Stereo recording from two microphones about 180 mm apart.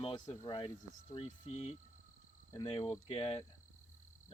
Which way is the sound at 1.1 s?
35° left (ahead or behind).